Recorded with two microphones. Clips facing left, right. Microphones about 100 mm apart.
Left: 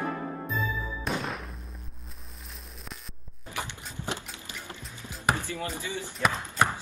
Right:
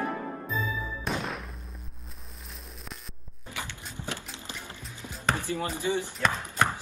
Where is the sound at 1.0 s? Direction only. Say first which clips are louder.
Left 1 dB; centre (ahead or behind).